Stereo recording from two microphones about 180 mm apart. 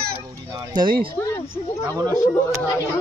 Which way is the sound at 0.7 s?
25° right (ahead or behind).